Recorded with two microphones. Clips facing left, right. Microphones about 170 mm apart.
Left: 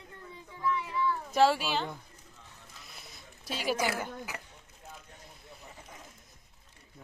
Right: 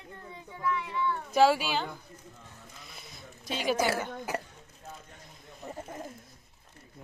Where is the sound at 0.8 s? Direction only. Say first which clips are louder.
Even; centre (ahead or behind).